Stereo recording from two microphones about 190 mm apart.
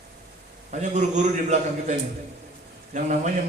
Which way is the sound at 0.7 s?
40° right (ahead or behind).